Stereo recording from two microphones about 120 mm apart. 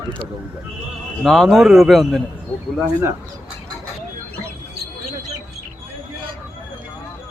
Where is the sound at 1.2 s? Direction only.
Centre (ahead or behind).